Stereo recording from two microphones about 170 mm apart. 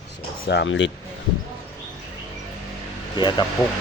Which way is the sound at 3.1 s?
25° left (ahead or behind).